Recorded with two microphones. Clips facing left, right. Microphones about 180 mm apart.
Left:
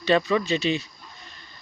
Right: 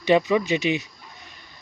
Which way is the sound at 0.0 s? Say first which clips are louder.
Right 2 dB; 20° right (ahead or behind).